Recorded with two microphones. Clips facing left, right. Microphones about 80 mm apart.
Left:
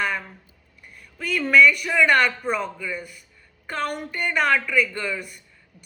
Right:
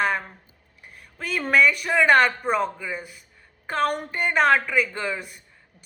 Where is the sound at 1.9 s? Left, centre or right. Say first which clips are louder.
Right 1 dB; right.